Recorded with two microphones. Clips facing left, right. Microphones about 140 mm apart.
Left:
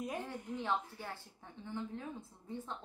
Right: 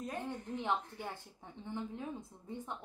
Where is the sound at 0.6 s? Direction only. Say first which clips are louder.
Even; 20° right (ahead or behind).